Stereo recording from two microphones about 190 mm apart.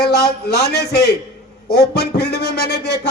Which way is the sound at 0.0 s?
60° left (ahead or behind).